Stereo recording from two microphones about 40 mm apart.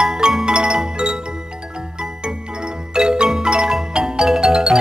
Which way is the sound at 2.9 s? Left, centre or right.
Right.